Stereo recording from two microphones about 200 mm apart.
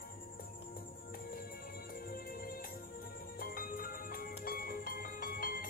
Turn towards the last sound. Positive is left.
turn(degrees=45)  # may be behind; listen again after turning